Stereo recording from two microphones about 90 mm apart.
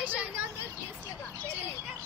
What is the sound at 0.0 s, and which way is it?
Vehicle, 15° right (ahead or behind).